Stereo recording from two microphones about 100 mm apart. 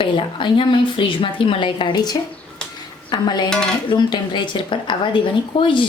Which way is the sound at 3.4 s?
5° left (ahead or behind).